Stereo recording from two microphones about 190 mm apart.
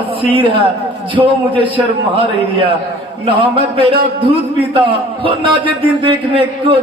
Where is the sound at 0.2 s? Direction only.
25° right (ahead or behind).